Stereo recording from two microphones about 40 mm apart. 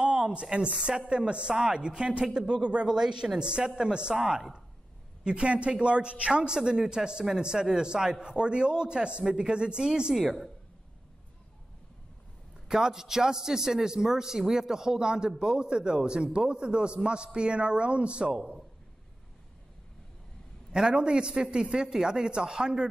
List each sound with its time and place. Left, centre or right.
0.0 s a woman's voice: right
4.1 s a man's voice: centre
5.2 s a woman's voice: right
10.1 s speech: centre
12.6 s a man's voice: centre
20.7 s a woman's voice: centre